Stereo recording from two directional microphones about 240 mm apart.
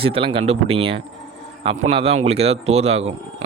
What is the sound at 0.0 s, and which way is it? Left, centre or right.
Speech, right.